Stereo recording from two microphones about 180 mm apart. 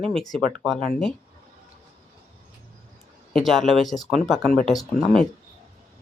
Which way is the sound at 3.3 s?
Centre (ahead or behind).